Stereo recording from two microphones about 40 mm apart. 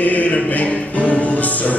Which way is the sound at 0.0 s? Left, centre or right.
Left.